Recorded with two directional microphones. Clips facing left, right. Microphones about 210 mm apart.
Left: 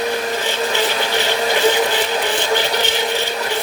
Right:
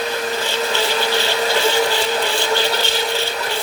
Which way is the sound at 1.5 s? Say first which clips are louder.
Left 2 dB; 15° left (ahead or behind).